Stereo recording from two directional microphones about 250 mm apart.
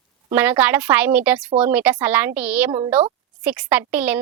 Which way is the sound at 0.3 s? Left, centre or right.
Centre.